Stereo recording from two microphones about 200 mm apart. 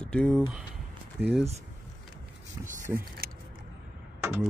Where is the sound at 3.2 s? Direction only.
50° right (ahead or behind).